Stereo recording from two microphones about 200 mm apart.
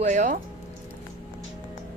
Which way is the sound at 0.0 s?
40° right (ahead or behind).